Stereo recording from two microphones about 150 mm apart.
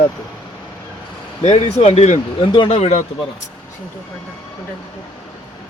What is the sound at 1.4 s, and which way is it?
Speech, 50° left (ahead or behind).